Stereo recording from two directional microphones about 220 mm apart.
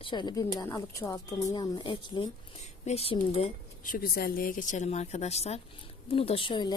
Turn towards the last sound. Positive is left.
turn(degrees=20)  # may be behind; listen again after turning